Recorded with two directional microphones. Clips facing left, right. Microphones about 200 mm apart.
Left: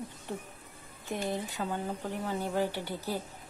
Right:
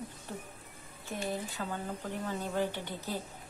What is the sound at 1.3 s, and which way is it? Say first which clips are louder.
Speech: left 1 dB; 20° left (ahead or behind).